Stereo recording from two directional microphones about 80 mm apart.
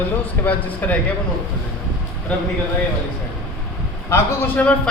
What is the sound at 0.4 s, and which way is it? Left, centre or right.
Speech, centre.